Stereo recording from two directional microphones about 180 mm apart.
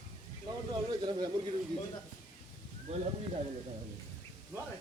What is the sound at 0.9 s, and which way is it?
Speech, 25° right (ahead or behind).